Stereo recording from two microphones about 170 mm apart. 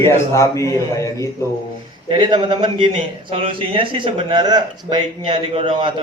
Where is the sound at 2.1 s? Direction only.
30° right (ahead or behind).